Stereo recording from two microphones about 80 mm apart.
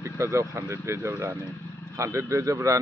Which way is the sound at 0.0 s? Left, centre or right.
Right.